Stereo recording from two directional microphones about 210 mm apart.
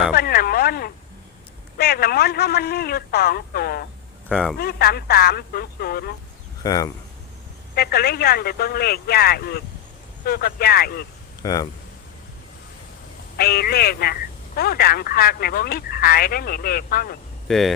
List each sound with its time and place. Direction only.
0.1 s radio: 45° left (ahead or behind)
1.8 s speech: 50° left (ahead or behind)
4.3 s a man's voice: centre (ahead or behind)
4.5 s speech: 45° left (ahead or behind)
6.6 s speech: 15° left (ahead or behind)
7.8 s speech: 45° left (ahead or behind)
11.4 s speech: 20° left (ahead or behind)
13.3 s speech: 45° left (ahead or behind)
17.5 s a man's voice: centre (ahead or behind)